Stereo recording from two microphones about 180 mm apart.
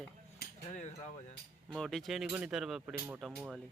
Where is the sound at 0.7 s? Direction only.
40° left (ahead or behind).